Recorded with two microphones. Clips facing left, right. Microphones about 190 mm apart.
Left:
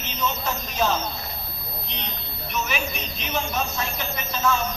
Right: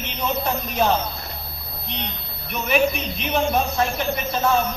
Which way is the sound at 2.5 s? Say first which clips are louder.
Right 8 dB; 55° right (ahead or behind).